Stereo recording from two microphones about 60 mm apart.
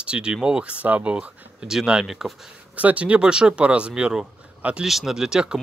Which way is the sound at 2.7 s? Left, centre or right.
Right.